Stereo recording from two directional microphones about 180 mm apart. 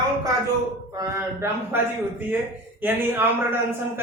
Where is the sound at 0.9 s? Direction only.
15° right (ahead or behind).